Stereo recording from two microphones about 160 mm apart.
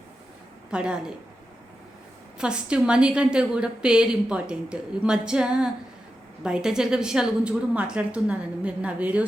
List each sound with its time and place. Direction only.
0.7 s a woman's voice: 5° right (ahead or behind)
2.4 s a woman's voice: 5° right (ahead or behind)